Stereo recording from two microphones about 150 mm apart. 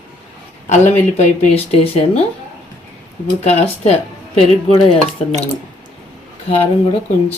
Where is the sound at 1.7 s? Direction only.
40° left (ahead or behind).